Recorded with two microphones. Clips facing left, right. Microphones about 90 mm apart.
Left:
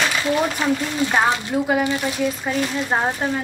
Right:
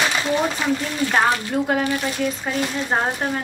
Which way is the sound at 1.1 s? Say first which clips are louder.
Right 1 dB; 5° left (ahead or behind).